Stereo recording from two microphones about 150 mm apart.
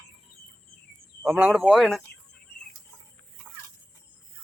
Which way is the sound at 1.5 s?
Centre (ahead or behind).